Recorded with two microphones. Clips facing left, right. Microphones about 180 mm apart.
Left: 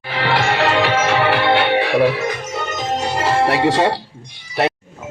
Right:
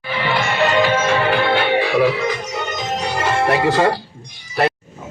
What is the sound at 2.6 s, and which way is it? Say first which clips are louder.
Music: left 3 dB; 40° left (ahead or behind).